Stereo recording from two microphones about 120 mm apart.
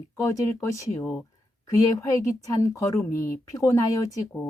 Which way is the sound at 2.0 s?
25° left (ahead or behind).